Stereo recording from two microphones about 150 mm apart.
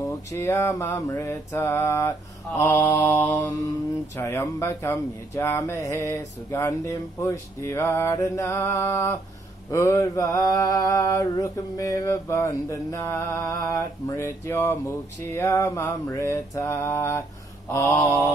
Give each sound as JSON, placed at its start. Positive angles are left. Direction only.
{"t": 0.3, "sound": "mantra", "side_deg": 20}